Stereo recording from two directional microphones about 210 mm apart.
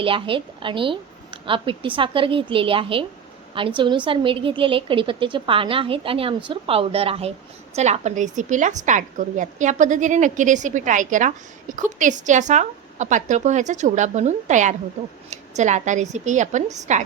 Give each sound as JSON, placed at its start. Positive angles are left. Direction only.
{"t": 0.0, "sound": "a woman's voice", "side_deg": -25}